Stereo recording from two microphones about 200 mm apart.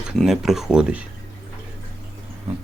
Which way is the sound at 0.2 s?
Centre (ahead or behind).